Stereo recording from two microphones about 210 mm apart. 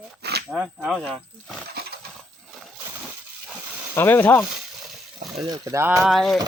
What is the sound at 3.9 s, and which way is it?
Speech, 10° left (ahead or behind).